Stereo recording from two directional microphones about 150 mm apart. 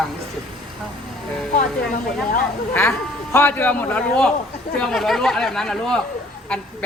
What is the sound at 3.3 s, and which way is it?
A woman's voice, 15° left (ahead or behind).